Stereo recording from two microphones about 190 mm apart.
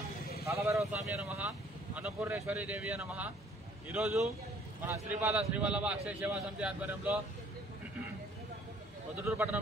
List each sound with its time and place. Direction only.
0.5 s speech: 15° right (ahead or behind)
9.2 s speech: 10° right (ahead or behind)